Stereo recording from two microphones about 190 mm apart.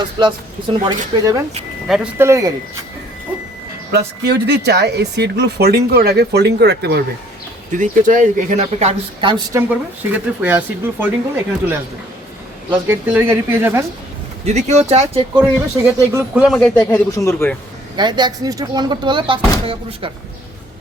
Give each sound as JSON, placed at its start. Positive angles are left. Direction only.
{"t": 0.2, "sound": "speech", "side_deg": -25}
{"t": 3.9, "sound": "speech", "side_deg": -60}
{"t": 7.7, "sound": "speech", "side_deg": -45}
{"t": 9.6, "sound": "speech", "side_deg": -10}
{"t": 12.7, "sound": "speech", "side_deg": -10}
{"t": 14.4, "sound": "speech", "side_deg": -35}
{"t": 15.4, "sound": "speech", "side_deg": -15}
{"t": 16.4, "sound": "a man's voice", "side_deg": 0}
{"t": 17.9, "sound": "speech", "side_deg": -25}